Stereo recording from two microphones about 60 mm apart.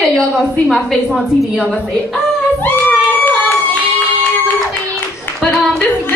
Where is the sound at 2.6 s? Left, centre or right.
Left.